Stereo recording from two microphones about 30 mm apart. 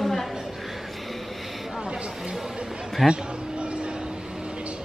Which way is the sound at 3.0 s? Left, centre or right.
Centre.